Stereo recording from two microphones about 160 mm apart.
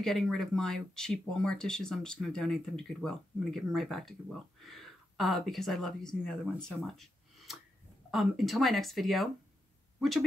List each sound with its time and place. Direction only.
0.0 s speech: 5° left (ahead or behind)
6.7 s a sound: centre (ahead or behind)
8.1 s speech: centre (ahead or behind)